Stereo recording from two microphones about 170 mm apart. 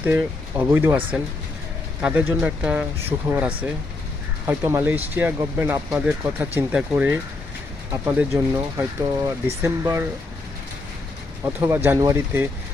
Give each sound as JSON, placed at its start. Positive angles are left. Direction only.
{"t": 0.0, "sound": "speech", "side_deg": -10}
{"t": 8.5, "sound": "speech", "side_deg": -15}
{"t": 11.4, "sound": "speech", "side_deg": -10}